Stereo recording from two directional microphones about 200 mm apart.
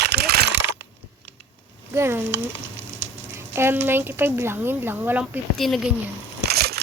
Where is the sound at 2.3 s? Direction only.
65° right (ahead or behind).